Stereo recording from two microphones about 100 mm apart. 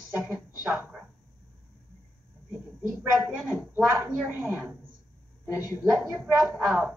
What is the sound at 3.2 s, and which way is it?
Speech, 20° right (ahead or behind).